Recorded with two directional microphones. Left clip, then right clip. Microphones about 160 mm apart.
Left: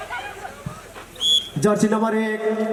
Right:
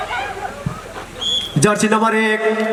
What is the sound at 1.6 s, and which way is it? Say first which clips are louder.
A man's voice: right 5 dB; 30° right (ahead or behind).